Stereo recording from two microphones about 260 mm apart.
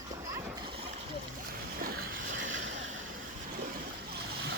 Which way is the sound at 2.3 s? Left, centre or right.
Right.